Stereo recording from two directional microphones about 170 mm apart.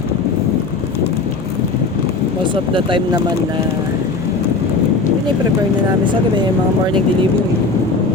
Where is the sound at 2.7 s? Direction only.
30° right (ahead or behind).